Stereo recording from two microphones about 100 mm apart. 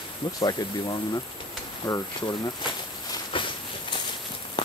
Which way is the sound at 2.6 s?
55° left (ahead or behind).